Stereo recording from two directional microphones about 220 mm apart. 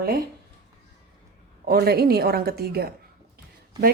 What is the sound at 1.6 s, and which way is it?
Speech, 45° right (ahead or behind).